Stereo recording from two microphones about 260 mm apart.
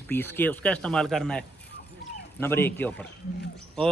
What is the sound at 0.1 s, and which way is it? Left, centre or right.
A man's voice, centre.